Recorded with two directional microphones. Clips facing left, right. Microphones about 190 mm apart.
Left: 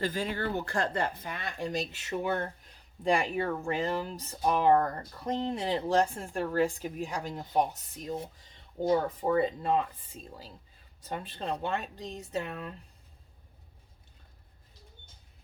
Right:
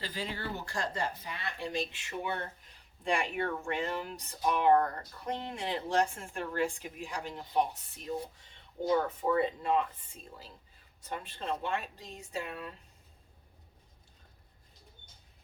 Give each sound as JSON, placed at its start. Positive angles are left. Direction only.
{"t": 0.0, "sound": "speech", "side_deg": 50}
{"t": 8.9, "sound": "speech", "side_deg": 30}